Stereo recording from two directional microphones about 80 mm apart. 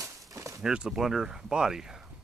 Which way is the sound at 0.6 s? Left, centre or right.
Centre.